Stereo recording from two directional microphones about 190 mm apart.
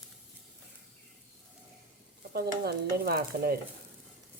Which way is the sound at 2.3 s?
55° right (ahead or behind).